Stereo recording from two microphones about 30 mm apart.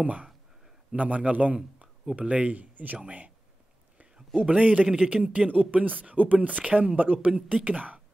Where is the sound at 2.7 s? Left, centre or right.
Right.